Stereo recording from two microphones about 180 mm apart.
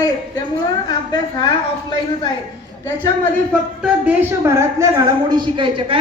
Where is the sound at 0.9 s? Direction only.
25° left (ahead or behind).